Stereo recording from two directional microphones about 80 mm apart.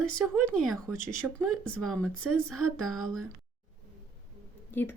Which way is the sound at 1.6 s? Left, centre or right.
Centre.